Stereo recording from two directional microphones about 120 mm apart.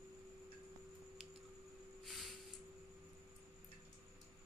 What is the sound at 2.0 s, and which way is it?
Snort, centre (ahead or behind).